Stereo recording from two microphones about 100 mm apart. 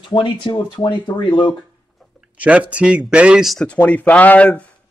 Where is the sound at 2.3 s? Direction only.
15° right (ahead or behind).